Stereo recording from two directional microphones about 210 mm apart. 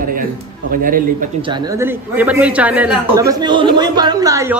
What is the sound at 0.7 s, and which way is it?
Speech, 40° right (ahead or behind).